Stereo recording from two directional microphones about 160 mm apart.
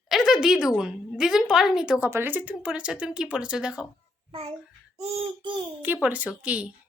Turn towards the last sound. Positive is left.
turn(degrees=-5)  # may be behind; listen again after turning